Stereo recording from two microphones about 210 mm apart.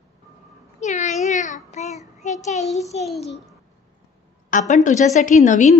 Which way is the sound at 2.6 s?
Centre (ahead or behind).